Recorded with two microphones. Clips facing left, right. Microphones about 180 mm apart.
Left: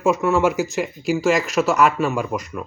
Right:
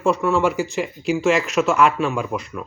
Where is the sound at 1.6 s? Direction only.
40° left (ahead or behind).